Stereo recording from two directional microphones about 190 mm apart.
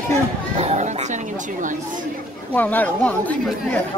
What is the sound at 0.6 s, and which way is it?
Chatter, 35° right (ahead or behind).